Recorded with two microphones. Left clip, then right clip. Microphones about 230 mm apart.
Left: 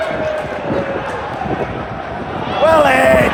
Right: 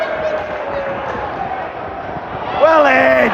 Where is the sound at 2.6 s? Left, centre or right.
Right.